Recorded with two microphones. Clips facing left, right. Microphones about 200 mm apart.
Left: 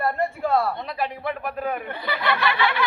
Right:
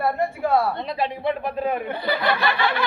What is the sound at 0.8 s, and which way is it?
Speech, 25° right (ahead or behind).